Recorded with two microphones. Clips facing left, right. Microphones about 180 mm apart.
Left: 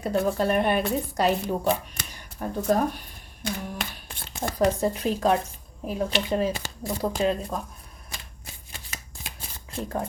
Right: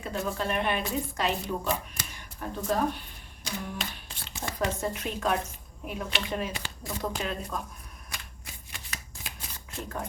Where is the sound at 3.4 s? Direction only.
55° left (ahead or behind).